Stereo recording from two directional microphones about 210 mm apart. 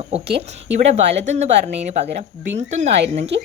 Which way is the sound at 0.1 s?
30° right (ahead or behind).